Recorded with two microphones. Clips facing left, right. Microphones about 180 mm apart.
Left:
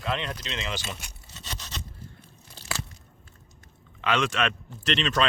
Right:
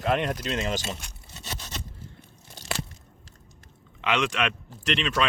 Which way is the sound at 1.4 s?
15° right (ahead or behind).